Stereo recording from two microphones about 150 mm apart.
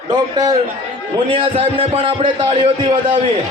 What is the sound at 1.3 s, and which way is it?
A man's voice, 40° right (ahead or behind).